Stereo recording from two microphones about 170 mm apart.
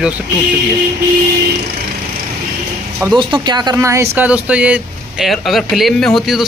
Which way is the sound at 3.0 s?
15° right (ahead or behind).